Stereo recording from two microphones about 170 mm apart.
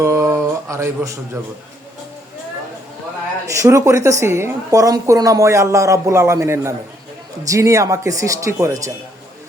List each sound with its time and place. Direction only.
0.0 s speech: 15° right (ahead or behind)
3.4 s a woman's voice: 20° right (ahead or behind)